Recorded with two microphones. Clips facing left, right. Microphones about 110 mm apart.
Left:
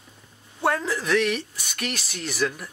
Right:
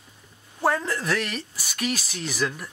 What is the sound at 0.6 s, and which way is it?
Speech, centre (ahead or behind).